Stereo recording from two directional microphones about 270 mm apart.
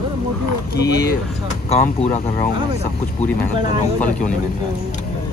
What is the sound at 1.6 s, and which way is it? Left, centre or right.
Speech, left.